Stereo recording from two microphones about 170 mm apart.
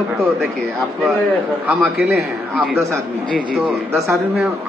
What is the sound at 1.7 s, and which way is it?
Speech, 5° right (ahead or behind).